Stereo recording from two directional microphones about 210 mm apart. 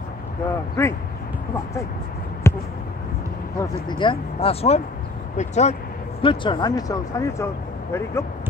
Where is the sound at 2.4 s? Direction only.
15° left (ahead or behind).